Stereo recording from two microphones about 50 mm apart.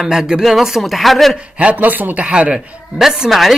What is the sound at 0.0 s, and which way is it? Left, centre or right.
Speech, centre.